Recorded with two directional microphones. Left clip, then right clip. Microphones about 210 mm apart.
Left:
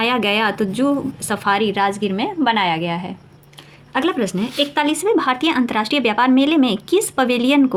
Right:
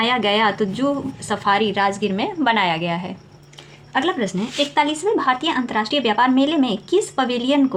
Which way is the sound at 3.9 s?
20° left (ahead or behind).